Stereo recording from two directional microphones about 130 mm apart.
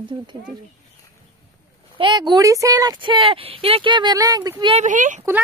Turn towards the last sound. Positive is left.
turn(degrees=-80)